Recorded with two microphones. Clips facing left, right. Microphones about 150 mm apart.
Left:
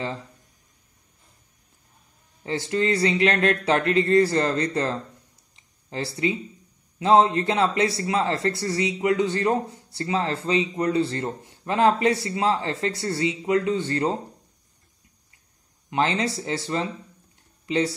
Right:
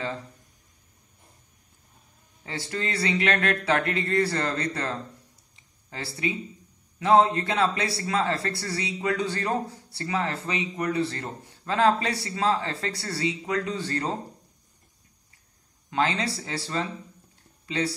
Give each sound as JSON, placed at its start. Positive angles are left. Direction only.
{"t": 2.4, "sound": "a man's voice", "side_deg": 20}
{"t": 15.9, "sound": "a man's voice", "side_deg": 20}